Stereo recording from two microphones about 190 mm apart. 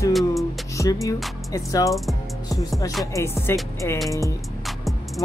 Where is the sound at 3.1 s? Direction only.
15° left (ahead or behind).